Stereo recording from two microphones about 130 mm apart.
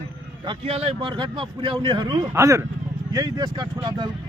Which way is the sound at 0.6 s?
50° right (ahead or behind).